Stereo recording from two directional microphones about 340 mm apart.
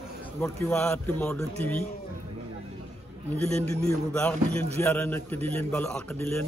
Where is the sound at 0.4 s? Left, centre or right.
Centre.